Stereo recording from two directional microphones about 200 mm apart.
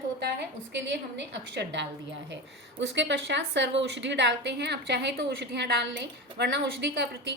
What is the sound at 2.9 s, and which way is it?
A woman's voice, 60° right (ahead or behind).